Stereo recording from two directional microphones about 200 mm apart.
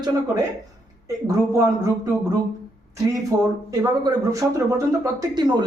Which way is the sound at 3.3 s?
15° right (ahead or behind).